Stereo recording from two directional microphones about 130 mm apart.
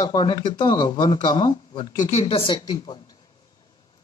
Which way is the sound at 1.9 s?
70° left (ahead or behind).